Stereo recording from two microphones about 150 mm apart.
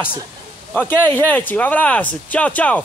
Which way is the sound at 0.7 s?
10° left (ahead or behind).